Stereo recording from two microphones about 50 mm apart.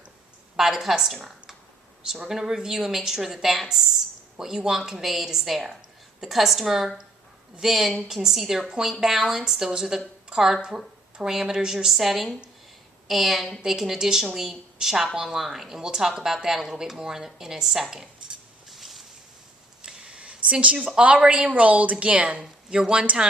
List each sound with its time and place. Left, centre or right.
0.5 s speech: centre
2.1 s a woman's voice: centre
17.9 s cutlery: centre
19.8 s a sound: centre
20.9 s speech: right